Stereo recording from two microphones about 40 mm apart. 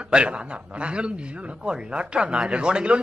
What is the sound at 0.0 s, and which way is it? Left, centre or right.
Speech, right.